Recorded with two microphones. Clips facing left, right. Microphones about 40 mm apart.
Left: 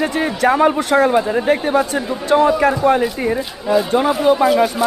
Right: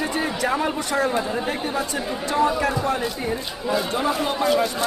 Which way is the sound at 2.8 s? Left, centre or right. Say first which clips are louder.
Left 10 dB; left.